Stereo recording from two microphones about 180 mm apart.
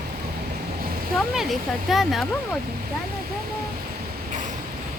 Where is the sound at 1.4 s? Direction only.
Centre (ahead or behind).